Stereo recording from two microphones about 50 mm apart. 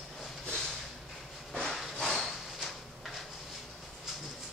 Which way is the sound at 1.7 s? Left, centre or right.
Centre.